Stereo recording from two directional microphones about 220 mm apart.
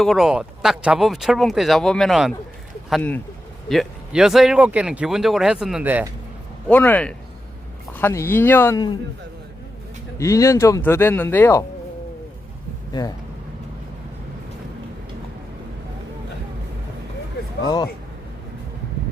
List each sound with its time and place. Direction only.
0.0 s speech: centre (ahead or behind)
6.7 s speech: 10° left (ahead or behind)
10.2 s speech: 15° left (ahead or behind)
12.9 s speech: 15° left (ahead or behind)